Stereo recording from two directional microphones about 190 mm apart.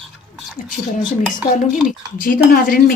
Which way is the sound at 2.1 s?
50° left (ahead or behind).